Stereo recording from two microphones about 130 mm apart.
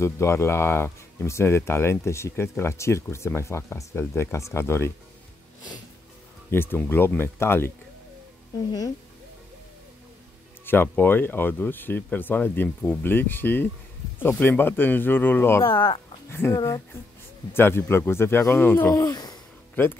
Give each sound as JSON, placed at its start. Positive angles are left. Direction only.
{"t": 0.0, "sound": "speech", "side_deg": 20}
{"t": 6.5, "sound": "speech", "side_deg": 15}
{"t": 10.6, "sound": "speech", "side_deg": 15}
{"t": 15.6, "sound": "speech", "side_deg": 40}
{"t": 16.3, "sound": "speech", "side_deg": 20}
{"t": 19.7, "sound": "speech", "side_deg": 15}